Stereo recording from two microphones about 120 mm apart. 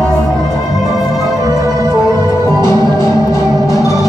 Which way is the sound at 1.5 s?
30° right (ahead or behind).